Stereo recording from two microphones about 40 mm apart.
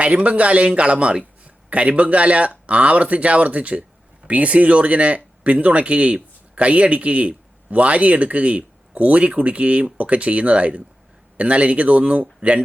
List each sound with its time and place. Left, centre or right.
0.0 s speech: right